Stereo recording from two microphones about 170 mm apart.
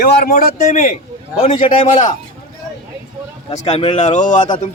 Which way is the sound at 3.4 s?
40° left (ahead or behind).